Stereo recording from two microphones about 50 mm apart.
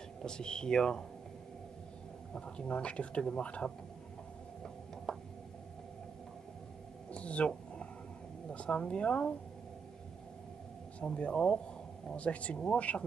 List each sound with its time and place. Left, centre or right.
0.2 s speech: centre
2.3 s speech: centre
5.1 s a sound: centre
7.1 s a sound: left
8.5 s speech: left
11.0 s speech: left